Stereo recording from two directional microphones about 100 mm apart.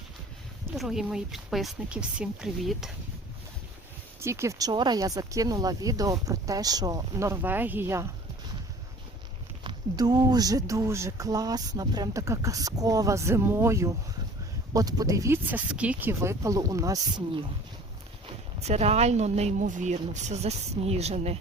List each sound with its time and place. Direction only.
0.8 s speech: 5° right (ahead or behind)
4.2 s speech: 30° right (ahead or behind)
7.4 s speech: 20° right (ahead or behind)
9.6 s speech: 45° right (ahead or behind)
15.4 s speech: 15° right (ahead or behind); by 17.2 s 35° right (ahead or behind)
18.6 s a woman's voice: 90° right